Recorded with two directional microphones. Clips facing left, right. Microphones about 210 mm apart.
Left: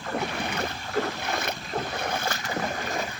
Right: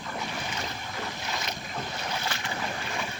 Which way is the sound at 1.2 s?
55° left (ahead or behind).